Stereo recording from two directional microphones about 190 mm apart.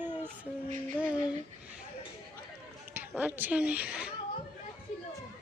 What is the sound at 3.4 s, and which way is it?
Speech, 10° right (ahead or behind).